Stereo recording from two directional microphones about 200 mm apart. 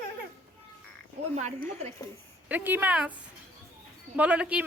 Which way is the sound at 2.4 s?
10° right (ahead or behind).